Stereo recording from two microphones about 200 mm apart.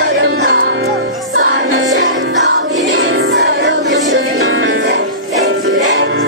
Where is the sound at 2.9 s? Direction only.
85° right.